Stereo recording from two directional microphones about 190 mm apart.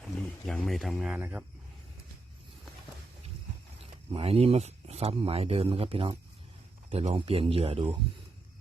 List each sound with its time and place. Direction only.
0.2 s speech: 5° left (ahead or behind)
3.8 s speech: 30° right (ahead or behind)